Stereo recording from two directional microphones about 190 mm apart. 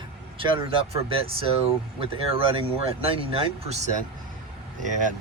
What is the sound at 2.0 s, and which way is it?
Speech, 30° right (ahead or behind).